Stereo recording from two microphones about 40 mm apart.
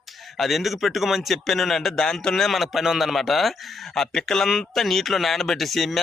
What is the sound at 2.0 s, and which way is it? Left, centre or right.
Speech, centre.